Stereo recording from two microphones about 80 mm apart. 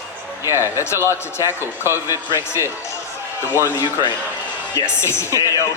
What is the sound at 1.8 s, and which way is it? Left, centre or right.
Speech, right.